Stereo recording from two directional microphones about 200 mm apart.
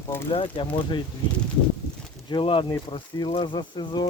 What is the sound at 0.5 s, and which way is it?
Speech, 25° left (ahead or behind).